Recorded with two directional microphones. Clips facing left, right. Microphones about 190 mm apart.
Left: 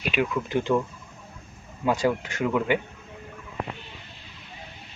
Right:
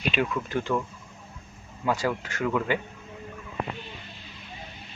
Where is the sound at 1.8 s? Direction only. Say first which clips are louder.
Left 3 dB; 20° left (ahead or behind).